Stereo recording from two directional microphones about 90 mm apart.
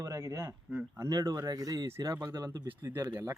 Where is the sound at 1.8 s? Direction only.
30° right (ahead or behind).